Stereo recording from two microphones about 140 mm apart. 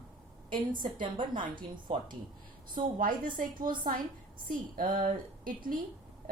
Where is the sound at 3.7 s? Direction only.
90° right.